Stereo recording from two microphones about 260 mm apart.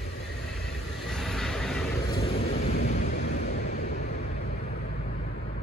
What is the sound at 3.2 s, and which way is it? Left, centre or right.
Vehicle, left.